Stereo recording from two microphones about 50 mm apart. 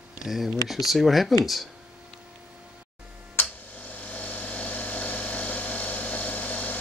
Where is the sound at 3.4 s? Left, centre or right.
Left.